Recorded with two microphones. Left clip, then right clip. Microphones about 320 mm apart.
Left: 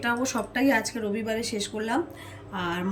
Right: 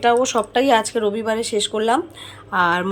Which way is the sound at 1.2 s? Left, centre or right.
Centre.